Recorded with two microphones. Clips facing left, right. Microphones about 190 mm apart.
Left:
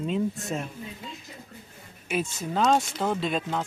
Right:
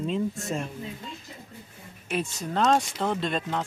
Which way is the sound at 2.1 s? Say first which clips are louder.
Left 1 dB; centre (ahead or behind).